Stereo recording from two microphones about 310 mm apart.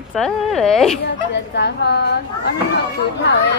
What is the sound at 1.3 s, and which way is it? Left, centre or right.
A child's voice, left.